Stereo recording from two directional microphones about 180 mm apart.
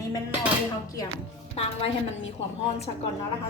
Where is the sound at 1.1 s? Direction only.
35° left (ahead or behind).